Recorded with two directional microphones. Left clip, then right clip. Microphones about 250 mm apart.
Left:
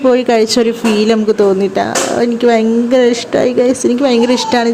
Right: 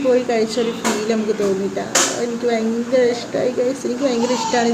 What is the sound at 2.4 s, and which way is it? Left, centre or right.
Speech, left.